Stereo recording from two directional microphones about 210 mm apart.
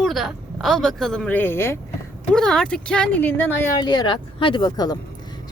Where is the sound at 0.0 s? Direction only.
Centre (ahead or behind).